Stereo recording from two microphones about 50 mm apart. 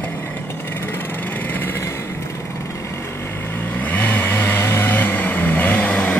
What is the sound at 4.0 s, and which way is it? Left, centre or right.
Vehicle, left.